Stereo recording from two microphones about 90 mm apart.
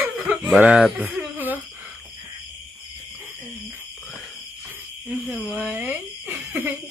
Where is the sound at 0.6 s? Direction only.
10° right (ahead or behind).